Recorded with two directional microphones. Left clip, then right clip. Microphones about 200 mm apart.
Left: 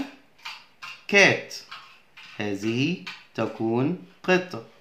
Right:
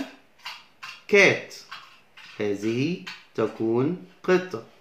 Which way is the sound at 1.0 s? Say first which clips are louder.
Even; 40° left (ahead or behind).